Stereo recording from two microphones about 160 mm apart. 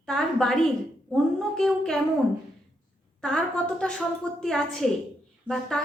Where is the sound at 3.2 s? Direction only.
5° left (ahead or behind).